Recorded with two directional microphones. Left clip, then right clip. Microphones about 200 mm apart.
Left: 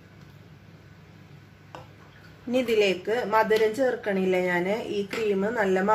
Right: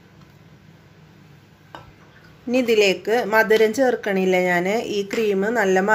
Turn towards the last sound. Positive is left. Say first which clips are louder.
# right 5 dB
turn(degrees=-35)  # may be behind; listen again after turning